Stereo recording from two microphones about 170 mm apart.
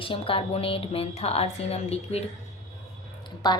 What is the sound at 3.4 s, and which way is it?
Speech, 25° left (ahead or behind).